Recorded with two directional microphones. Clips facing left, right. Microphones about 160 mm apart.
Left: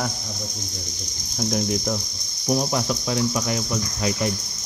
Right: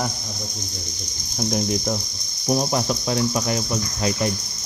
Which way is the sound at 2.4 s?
25° right (ahead or behind).